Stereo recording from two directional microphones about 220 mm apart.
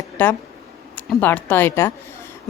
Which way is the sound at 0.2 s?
10° left (ahead or behind).